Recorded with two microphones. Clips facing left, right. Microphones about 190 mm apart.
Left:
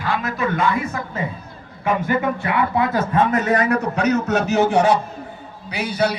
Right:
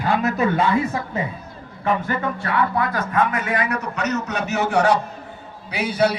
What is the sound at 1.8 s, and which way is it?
A man's voice, 15° left (ahead or behind).